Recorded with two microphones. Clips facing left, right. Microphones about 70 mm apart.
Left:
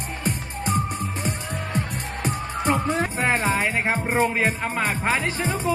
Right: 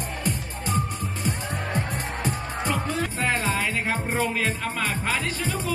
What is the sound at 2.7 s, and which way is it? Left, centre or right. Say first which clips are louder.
Music: left 5 dB; left.